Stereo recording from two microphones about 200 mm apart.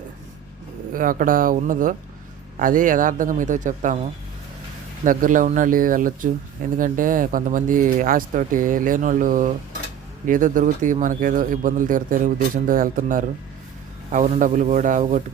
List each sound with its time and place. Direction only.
0.9 s speech: 45° right (ahead or behind)
5.0 s speech: 40° right (ahead or behind)